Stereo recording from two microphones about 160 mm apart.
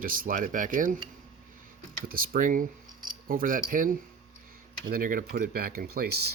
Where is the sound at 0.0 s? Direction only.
60° right (ahead or behind).